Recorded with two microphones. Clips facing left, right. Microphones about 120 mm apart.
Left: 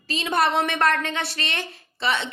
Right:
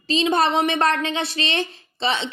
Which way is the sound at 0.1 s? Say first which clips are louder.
Right 3 dB; 25° right (ahead or behind).